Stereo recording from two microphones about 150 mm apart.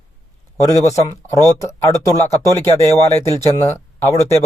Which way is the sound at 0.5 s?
20° left (ahead or behind).